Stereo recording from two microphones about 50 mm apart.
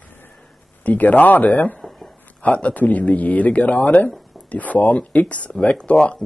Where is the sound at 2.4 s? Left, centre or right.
Left.